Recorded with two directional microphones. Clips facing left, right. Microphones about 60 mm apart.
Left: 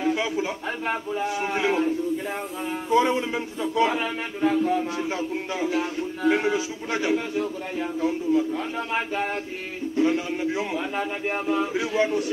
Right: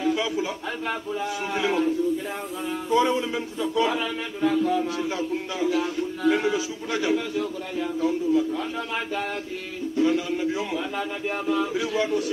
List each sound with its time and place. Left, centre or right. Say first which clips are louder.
0.0 s a man's voice: even; left